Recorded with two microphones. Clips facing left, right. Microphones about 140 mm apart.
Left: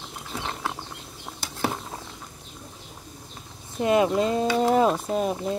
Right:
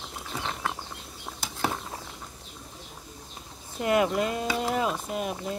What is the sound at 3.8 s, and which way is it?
Speech, 25° left (ahead or behind).